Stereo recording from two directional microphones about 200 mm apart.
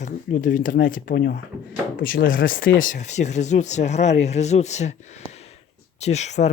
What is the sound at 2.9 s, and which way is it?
Speech, 35° left (ahead or behind).